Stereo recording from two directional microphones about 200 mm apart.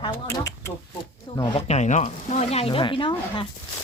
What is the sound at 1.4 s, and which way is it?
Speech, 30° left (ahead or behind).